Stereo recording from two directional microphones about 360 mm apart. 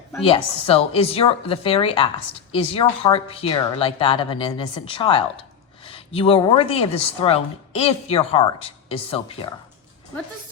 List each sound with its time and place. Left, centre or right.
0.1 s a woman's voice: centre